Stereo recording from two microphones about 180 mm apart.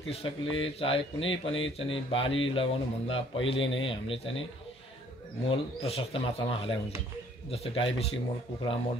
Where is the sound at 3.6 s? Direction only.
90° left.